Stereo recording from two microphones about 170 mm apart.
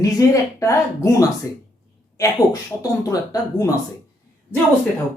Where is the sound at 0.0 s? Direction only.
20° left (ahead or behind).